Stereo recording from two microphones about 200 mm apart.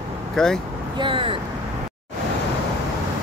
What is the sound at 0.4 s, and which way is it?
Speech, 5° left (ahead or behind).